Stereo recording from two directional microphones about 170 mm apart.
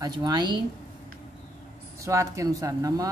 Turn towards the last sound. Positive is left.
turn(degrees=-20)  # may be behind; listen again after turning